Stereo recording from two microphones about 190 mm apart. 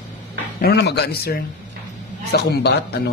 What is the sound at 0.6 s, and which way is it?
A man's voice, 55° left (ahead or behind).